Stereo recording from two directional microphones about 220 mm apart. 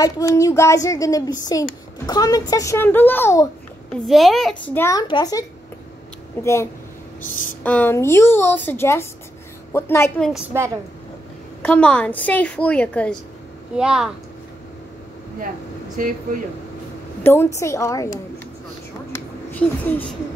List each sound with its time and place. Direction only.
0.0 s a child's voice: 15° left (ahead or behind)
3.9 s a child's voice: centre (ahead or behind); by 5.4 s 20° left (ahead or behind)
6.4 s a child's voice: 10° left (ahead or behind)
11.6 s a woman's voice: 5° left (ahead or behind)
16.0 s speech: 40° right (ahead or behind)
17.2 s a child's voice: 10° left (ahead or behind)
19.1 s a sound: 5° left (ahead or behind)